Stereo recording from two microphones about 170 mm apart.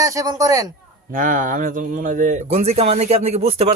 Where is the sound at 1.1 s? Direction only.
50° right (ahead or behind).